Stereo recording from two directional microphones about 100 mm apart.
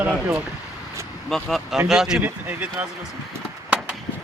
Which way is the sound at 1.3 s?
Centre (ahead or behind).